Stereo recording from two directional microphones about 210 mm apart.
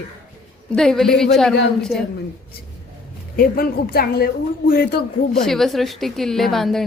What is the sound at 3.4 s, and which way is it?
A woman's voice, 45° left (ahead or behind).